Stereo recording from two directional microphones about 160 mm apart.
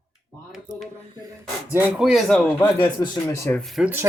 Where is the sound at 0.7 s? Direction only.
50° right (ahead or behind).